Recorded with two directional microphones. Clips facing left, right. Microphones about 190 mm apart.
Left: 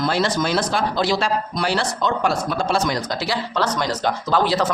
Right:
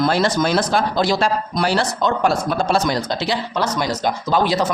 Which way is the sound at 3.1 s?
20° right (ahead or behind).